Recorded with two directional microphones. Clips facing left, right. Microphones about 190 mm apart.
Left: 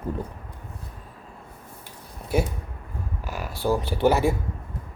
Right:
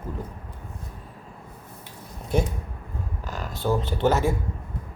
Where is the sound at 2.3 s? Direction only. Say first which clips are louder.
Even; 10° left (ahead or behind).